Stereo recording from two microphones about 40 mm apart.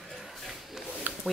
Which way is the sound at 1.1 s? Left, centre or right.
Right.